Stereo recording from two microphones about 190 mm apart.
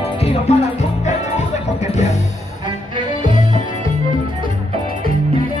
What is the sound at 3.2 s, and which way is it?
Music, 40° left (ahead or behind).